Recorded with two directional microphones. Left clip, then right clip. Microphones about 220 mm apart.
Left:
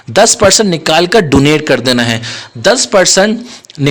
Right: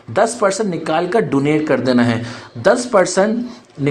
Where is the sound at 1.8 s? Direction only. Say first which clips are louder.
Left 5 dB; 30° left (ahead or behind).